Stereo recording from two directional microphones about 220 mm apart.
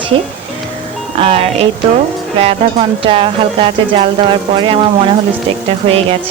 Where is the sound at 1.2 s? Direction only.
25° right (ahead or behind).